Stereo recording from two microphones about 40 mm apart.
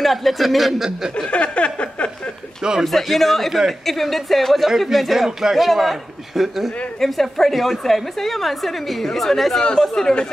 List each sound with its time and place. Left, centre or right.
0.0 s a woman's voice: centre
1.1 s a sound: left
2.8 s a woman's voice: centre
7.0 s a woman's voice: centre